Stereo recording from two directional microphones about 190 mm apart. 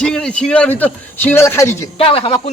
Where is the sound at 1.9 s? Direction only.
30° left (ahead or behind).